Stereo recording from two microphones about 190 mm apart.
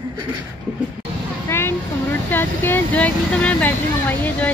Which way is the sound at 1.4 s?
10° left (ahead or behind).